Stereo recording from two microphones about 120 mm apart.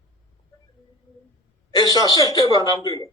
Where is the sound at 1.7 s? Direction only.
30° left (ahead or behind).